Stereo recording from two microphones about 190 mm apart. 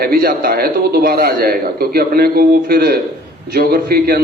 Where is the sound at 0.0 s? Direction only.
55° right (ahead or behind).